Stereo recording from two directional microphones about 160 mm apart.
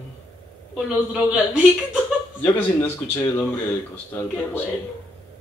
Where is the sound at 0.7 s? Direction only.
5° right (ahead or behind).